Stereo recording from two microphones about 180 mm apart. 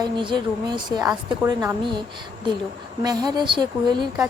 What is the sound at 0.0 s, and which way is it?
A woman's voice, 25° right (ahead or behind).